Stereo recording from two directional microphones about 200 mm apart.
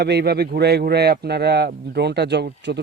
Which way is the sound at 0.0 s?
55° right (ahead or behind).